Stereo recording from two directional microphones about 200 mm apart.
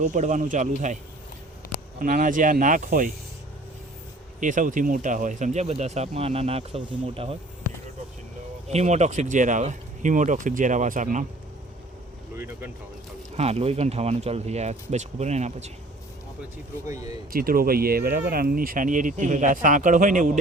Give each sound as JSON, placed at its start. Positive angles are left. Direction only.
{"t": 0.0, "sound": "speech", "side_deg": -35}
{"t": 2.0, "sound": "speech", "side_deg": -40}
{"t": 4.4, "sound": "speech", "side_deg": -40}
{"t": 8.7, "sound": "speech", "side_deg": -35}
{"t": 12.4, "sound": "speech", "side_deg": -10}
{"t": 13.3, "sound": "speech", "side_deg": -30}
{"t": 16.8, "sound": "speech", "side_deg": -15}
{"t": 17.3, "sound": "speech", "side_deg": -45}